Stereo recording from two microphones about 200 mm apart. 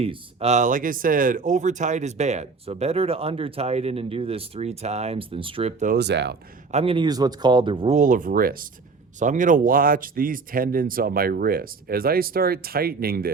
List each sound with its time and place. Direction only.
0.0 s speech: 30° right (ahead or behind)
5.8 s speech: 50° right (ahead or behind)
6.7 s speech: 30° right (ahead or behind)
7.9 s speech: 40° right (ahead or behind)